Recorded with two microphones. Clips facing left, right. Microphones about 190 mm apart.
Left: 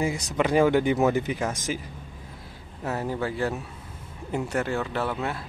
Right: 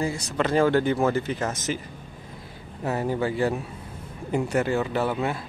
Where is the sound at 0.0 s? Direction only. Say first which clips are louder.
Left 1 dB; 15° left (ahead or behind).